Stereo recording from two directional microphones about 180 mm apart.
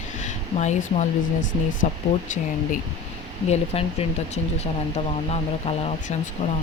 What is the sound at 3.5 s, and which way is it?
Speech, 35° left (ahead or behind).